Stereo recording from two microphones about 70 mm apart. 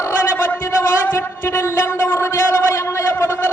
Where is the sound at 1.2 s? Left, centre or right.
Left.